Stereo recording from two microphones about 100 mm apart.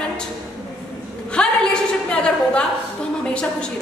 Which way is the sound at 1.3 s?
10° left (ahead or behind).